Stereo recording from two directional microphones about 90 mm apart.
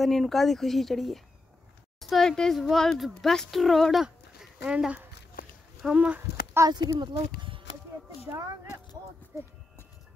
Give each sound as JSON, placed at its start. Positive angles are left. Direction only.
{"t": 0.0, "sound": "speech", "side_deg": 0}
{"t": 6.7, "sound": "speech", "side_deg": -55}
{"t": 8.3, "sound": "speech", "side_deg": -35}